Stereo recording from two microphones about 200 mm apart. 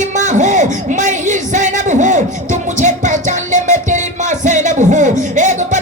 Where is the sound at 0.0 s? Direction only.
40° right (ahead or behind).